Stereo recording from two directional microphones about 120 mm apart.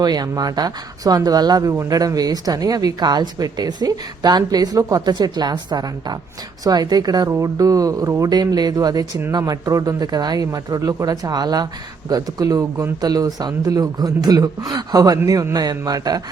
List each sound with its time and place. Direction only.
0.0 s speech: 35° right (ahead or behind)